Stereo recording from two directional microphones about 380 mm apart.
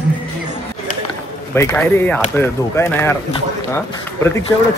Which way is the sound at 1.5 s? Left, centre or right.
Centre.